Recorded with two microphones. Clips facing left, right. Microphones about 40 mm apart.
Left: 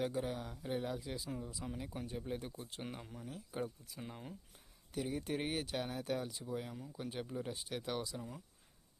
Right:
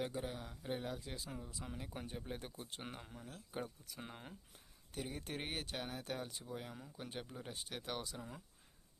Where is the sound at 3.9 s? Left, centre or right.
Centre.